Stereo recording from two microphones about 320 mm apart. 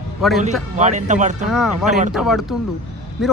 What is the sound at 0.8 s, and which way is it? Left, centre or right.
Speech, right.